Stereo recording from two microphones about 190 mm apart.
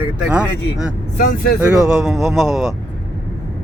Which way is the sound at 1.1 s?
50° left (ahead or behind).